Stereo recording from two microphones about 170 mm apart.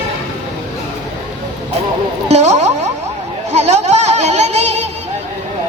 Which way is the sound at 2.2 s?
40° right (ahead or behind).